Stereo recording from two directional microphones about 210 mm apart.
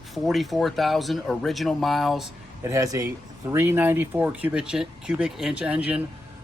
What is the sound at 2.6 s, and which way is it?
Speech, 15° right (ahead or behind).